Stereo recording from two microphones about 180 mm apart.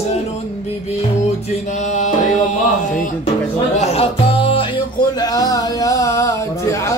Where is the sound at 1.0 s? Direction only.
35° left (ahead or behind).